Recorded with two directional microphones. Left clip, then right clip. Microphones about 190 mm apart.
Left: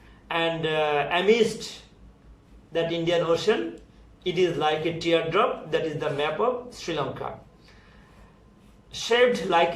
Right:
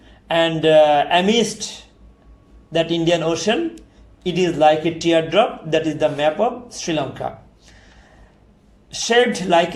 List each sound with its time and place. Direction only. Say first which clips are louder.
0.3 s a man's voice: right 10 dB; 45° right (ahead or behind)
2.7 s a man's voice: right 6 dB; 45° right (ahead or behind)
8.9 s a man's voice: right 5 dB; 45° right (ahead or behind)